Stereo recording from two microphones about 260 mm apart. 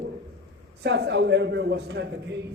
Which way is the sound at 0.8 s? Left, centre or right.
Right.